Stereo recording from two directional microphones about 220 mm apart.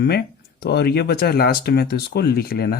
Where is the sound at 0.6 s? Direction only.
50° left (ahead or behind).